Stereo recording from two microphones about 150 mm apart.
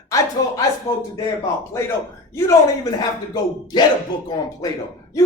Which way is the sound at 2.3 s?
20° left (ahead or behind).